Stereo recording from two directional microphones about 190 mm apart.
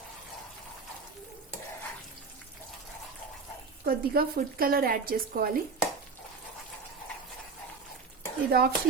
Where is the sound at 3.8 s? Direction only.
50° right (ahead or behind).